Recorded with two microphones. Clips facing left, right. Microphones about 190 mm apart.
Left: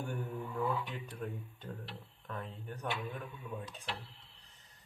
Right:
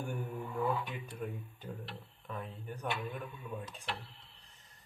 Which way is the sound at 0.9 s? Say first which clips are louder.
Right 1 dB; 10° right (ahead or behind).